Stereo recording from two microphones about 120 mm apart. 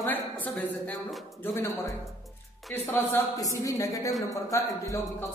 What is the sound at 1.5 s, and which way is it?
Speech, 30° left (ahead or behind).